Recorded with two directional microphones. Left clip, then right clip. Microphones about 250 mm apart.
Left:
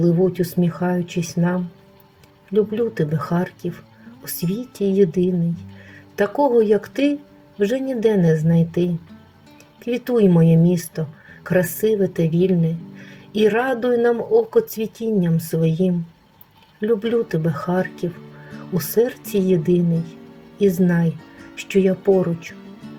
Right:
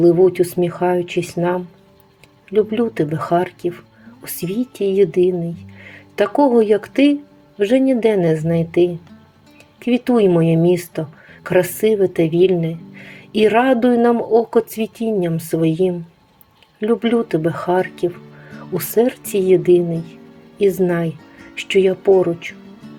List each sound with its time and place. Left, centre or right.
0.0 s speech: centre
9.9 s speech: centre
19.9 s speech: centre
20.6 s speech: centre
21.2 s music: centre
22.5 s music: centre